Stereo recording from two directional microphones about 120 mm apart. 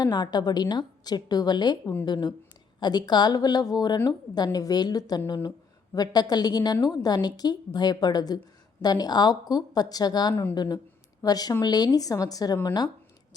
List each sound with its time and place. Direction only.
0.0 s a woman's voice: 35° left (ahead or behind)